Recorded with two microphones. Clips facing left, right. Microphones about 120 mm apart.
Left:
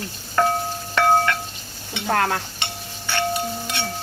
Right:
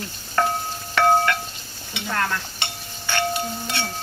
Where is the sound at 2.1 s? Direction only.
60° left (ahead or behind).